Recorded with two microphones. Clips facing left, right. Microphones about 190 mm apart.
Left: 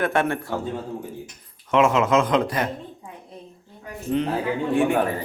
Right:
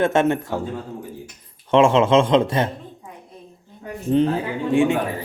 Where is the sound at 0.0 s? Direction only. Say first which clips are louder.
Right 4 dB; 25° right (ahead or behind).